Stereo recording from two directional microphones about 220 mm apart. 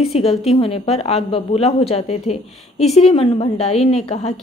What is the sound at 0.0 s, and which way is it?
A woman's voice, 25° left (ahead or behind).